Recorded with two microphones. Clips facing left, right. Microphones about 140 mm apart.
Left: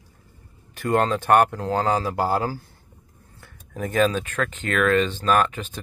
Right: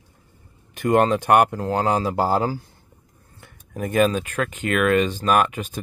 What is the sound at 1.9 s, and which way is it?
Speech, 20° right (ahead or behind).